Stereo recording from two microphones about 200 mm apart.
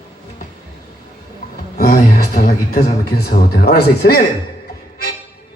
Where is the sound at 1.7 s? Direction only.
45° left (ahead or behind).